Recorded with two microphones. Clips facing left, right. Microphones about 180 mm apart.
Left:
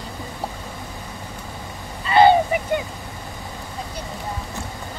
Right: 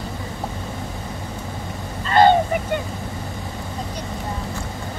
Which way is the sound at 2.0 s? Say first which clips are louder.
Left 1 dB; 10° left (ahead or behind).